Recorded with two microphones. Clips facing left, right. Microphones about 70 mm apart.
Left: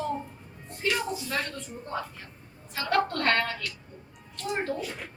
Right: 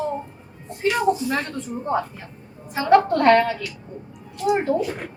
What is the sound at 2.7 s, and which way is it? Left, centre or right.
A woman's voice, centre.